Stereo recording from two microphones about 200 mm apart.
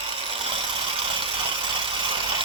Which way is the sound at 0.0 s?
25° right (ahead or behind).